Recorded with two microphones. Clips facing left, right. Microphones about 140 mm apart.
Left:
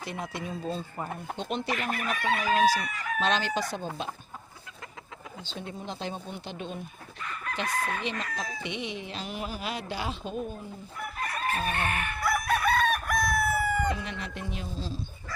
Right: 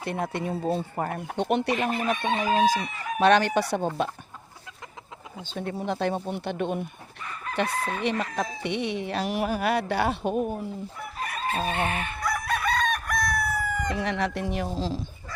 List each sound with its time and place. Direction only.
0.0 s speech: 60° right (ahead or behind)
1.7 s chicken: 25° right (ahead or behind)
3.2 s speech: 65° right (ahead or behind)
5.5 s speech: 60° right (ahead or behind)
7.7 s chicken: 25° right (ahead or behind)
8.6 s speech: 65° right (ahead or behind)
11.2 s chicken: 20° right (ahead or behind)
12.2 s chicken: 10° left (ahead or behind)
13.9 s speech: 80° right